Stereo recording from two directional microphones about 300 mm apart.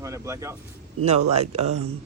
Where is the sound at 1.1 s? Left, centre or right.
Right.